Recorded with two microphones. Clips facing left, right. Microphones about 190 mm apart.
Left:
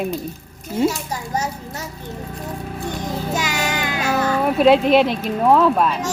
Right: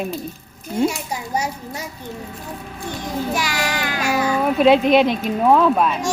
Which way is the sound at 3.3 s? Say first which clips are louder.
Even; 20° left (ahead or behind).